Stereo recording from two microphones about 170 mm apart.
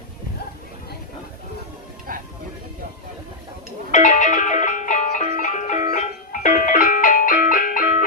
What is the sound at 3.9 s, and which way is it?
Music, 50° left (ahead or behind).